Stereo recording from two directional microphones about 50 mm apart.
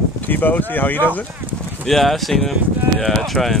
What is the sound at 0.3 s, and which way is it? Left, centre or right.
Speech, left.